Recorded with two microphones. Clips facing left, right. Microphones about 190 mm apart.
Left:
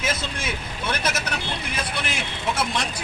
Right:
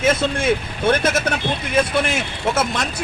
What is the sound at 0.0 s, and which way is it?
A man's voice, 55° right (ahead or behind).